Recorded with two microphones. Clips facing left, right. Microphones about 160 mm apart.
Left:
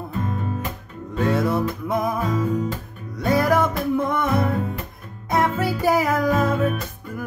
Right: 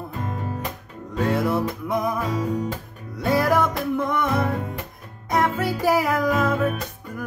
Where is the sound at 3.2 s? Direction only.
Centre (ahead or behind).